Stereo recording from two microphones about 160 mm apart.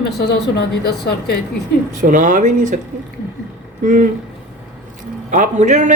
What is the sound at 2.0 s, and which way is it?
Speech, 55° right (ahead or behind).